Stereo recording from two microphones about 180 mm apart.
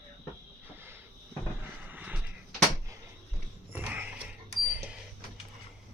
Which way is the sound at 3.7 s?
10° right (ahead or behind).